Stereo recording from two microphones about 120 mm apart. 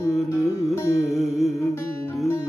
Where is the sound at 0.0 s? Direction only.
25° left (ahead or behind).